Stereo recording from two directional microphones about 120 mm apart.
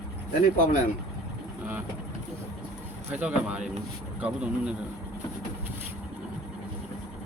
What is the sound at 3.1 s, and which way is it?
Speech, 10° right (ahead or behind).